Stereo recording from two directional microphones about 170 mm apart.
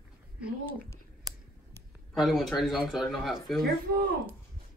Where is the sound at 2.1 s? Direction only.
Centre (ahead or behind).